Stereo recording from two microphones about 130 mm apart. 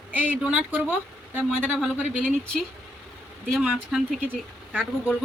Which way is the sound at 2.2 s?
5° left (ahead or behind).